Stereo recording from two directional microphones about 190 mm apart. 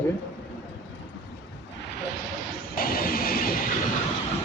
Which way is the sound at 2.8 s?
50° left (ahead or behind).